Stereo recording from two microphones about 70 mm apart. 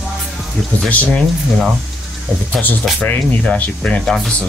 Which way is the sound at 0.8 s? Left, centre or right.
Left.